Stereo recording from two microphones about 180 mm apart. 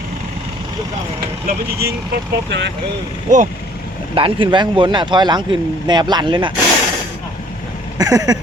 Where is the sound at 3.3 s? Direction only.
45° right (ahead or behind).